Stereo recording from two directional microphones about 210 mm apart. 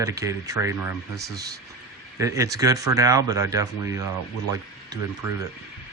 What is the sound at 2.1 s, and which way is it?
Speech, 15° right (ahead or behind).